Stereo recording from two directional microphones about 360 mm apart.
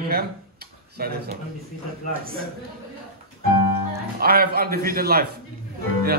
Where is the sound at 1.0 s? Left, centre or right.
Right.